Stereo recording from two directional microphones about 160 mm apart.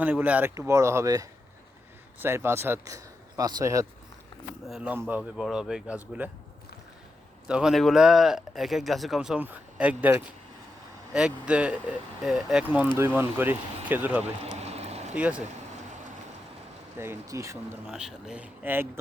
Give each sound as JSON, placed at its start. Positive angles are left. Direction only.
{"t": 0.0, "sound": "speech", "side_deg": -10}
{"t": 4.6, "sound": "speech", "side_deg": -5}
{"t": 7.4, "sound": "speech", "side_deg": -5}
{"t": 14.6, "sound": "a sound", "side_deg": -40}
{"t": 15.1, "sound": "speech", "side_deg": -10}
{"t": 17.0, "sound": "speech", "side_deg": -15}
{"t": 17.8, "sound": "speech", "side_deg": -5}